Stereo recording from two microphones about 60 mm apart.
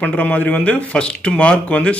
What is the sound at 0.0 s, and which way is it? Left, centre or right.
Speech, left.